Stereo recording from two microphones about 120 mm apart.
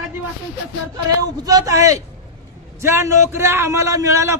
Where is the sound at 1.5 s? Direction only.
30° right (ahead or behind).